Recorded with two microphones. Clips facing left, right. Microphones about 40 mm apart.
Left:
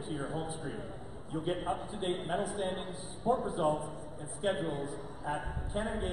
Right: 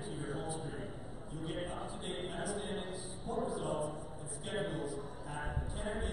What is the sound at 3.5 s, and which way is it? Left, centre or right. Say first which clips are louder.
A man's voice: left 5 dB; left.